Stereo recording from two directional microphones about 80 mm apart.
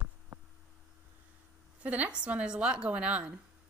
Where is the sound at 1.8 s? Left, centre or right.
Centre.